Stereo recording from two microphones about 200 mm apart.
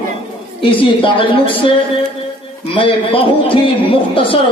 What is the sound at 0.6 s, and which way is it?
Speech, 25° left (ahead or behind).